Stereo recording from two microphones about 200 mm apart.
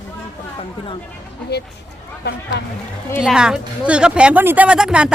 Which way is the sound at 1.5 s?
55° left (ahead or behind).